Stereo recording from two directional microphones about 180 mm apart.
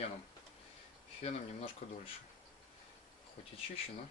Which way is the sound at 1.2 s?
35° left (ahead or behind).